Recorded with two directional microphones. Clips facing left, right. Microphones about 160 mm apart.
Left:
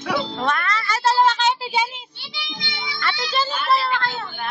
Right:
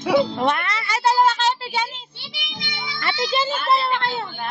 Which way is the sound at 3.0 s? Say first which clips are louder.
Right 2 dB; 20° right (ahead or behind).